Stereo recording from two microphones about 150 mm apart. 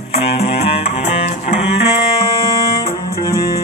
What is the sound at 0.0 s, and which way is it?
Music, 40° left (ahead or behind).